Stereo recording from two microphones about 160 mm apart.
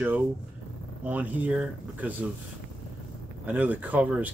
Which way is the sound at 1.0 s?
10° right (ahead or behind).